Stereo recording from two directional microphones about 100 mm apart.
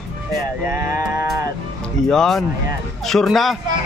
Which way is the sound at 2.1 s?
5° left (ahead or behind).